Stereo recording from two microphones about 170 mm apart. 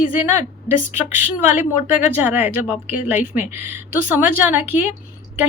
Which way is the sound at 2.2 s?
10° right (ahead or behind).